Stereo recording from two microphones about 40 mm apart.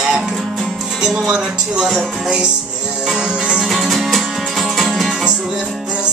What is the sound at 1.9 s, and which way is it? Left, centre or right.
Music, centre.